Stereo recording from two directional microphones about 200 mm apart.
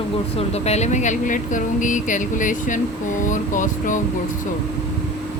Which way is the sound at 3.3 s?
40° left (ahead or behind).